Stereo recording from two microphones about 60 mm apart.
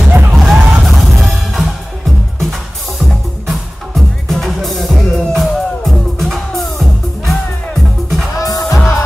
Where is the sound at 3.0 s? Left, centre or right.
Centre.